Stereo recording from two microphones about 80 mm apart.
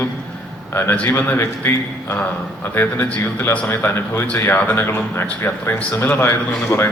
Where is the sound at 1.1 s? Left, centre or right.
Left.